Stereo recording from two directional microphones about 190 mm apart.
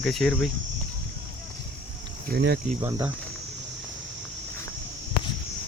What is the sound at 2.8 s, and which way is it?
Speech, 20° right (ahead or behind).